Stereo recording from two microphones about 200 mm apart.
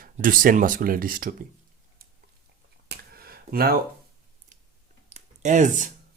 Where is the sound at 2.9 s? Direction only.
50° right (ahead or behind).